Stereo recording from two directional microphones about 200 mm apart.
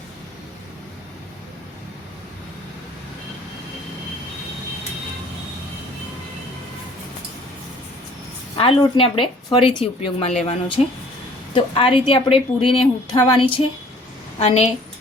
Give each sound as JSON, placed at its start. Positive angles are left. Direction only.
{"t": 8.5, "sound": "a woman's voice", "side_deg": 25}
{"t": 14.3, "sound": "a woman's voice", "side_deg": 30}